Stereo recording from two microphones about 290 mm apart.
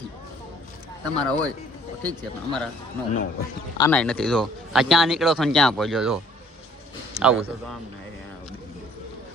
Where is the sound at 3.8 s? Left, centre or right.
Centre.